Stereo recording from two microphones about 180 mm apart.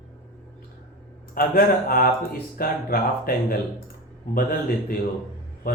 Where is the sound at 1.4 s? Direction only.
55° left (ahead or behind).